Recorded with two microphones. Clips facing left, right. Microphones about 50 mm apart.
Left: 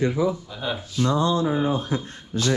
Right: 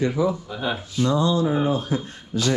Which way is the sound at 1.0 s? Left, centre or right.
Left.